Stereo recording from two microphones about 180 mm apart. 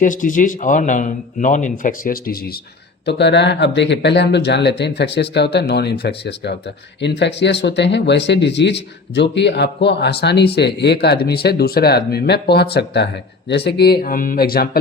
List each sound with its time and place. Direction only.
0.0 s speech: 45° left (ahead or behind)
3.1 s speech: 70° left (ahead or behind); by 14.8 s 55° left (ahead or behind)